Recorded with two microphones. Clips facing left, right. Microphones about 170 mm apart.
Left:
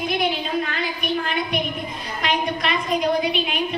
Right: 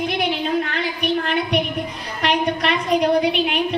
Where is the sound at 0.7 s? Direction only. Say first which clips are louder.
Right 3 dB; 70° right (ahead or behind).